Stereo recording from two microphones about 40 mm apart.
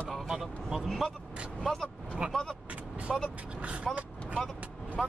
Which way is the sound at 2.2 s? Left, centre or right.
Centre.